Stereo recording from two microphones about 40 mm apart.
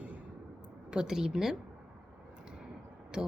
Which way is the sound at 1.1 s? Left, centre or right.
Centre.